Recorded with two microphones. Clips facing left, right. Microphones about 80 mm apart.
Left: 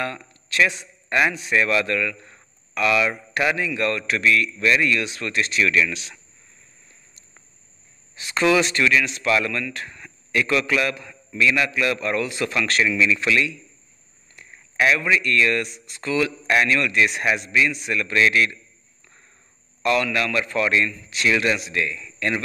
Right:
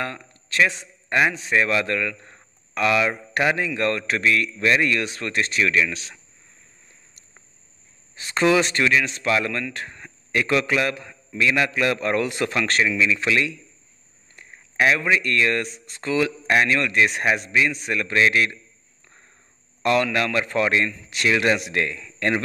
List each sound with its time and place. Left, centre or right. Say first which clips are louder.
0.0 s a man's voice: left 1 dB; right
1.3 s speech: even; right
5.6 s speech: left 1 dB; right
8.2 s speech: even; right
12.8 s speech: left 1 dB; centre
14.5 s a man's voice: even; right
19.8 s speech: right 1 dB; right
21.4 s speech: right 2 dB; right